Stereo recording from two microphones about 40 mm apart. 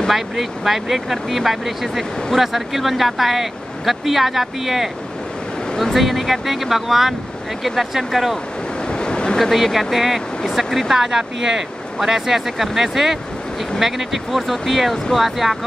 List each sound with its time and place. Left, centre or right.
0.1 s speech: centre
8.8 s a sound: left
9.4 s speech: centre